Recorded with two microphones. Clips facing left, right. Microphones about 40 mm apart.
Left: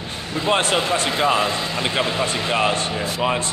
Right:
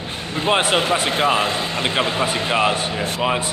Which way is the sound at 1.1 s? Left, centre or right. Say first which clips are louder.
Right 1 dB; right.